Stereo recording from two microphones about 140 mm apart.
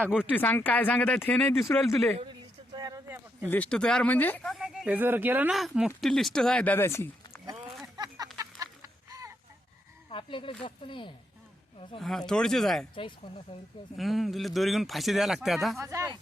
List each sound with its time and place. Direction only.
0.0 s speech: 5° right (ahead or behind)
0.3 s speech: 15° left (ahead or behind)
1.5 s speech: 20° left (ahead or behind)
2.7 s a sound: 30° right (ahead or behind)
3.5 s speech: 10° left (ahead or behind)
4.9 s speech: 15° right (ahead or behind)
5.5 s speech: centre (ahead or behind); by 7.1 s 15° left (ahead or behind)
7.9 s a sound: 30° right (ahead or behind)
8.4 s chicken: 25° right (ahead or behind)
10.1 s speech: 35° left (ahead or behind)
11.9 s speech: centre (ahead or behind)
13.0 s speech: 40° left (ahead or behind)
13.9 s speech: centre (ahead or behind)
15.8 s speech: 20° right (ahead or behind)